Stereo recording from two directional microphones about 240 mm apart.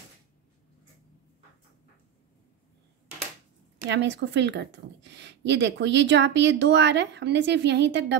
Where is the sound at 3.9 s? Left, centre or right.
Right.